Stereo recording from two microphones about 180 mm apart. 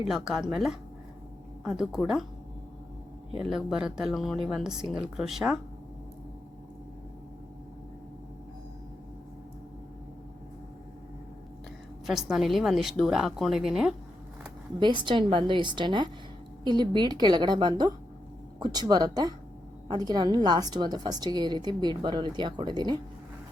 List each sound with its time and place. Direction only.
0.1 s speech: centre (ahead or behind)
3.3 s speech: 5° right (ahead or behind)
12.0 s speech: centre (ahead or behind)
14.8 s a woman's voice: 25° right (ahead or behind)